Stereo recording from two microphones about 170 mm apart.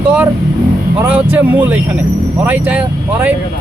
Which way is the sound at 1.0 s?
10° right (ahead or behind).